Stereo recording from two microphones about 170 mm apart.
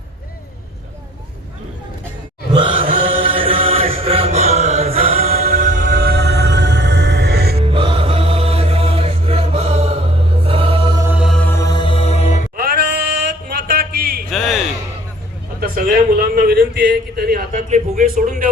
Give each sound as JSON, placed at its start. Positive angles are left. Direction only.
{"t": 2.5, "sound": "mantra", "side_deg": -30}
{"t": 5.6, "sound": "music", "side_deg": -50}
{"t": 7.6, "sound": "music", "side_deg": -30}
{"t": 10.4, "sound": "mantra", "side_deg": -30}
{"t": 11.0, "sound": "music", "side_deg": -5}
{"t": 11.3, "sound": "music", "side_deg": 15}
{"t": 12.5, "sound": "bleat", "side_deg": -65}
{"t": 13.5, "sound": "a sound", "side_deg": -60}
{"t": 14.3, "sound": "a sound", "side_deg": 0}
{"t": 16.3, "sound": "a sound", "side_deg": -65}
{"t": 17.5, "sound": "speech", "side_deg": -45}